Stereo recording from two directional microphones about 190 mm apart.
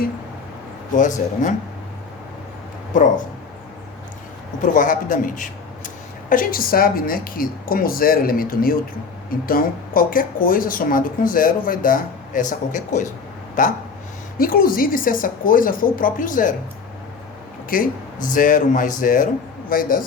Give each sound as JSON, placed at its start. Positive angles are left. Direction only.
{"t": 0.9, "sound": "speech", "side_deg": 40}
{"t": 2.9, "sound": "speech", "side_deg": 45}
{"t": 4.6, "sound": "speech", "side_deg": 45}
{"t": 17.7, "sound": "speech", "side_deg": 45}